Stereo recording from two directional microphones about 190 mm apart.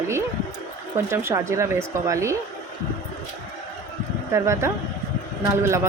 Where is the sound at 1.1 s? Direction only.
15° right (ahead or behind).